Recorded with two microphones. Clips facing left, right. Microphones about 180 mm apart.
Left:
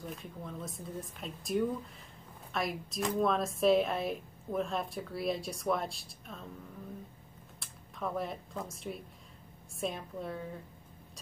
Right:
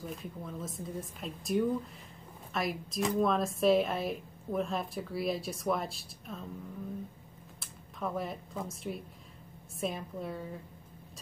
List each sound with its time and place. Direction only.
0.0 s speech: centre (ahead or behind)
7.6 s speech: centre (ahead or behind)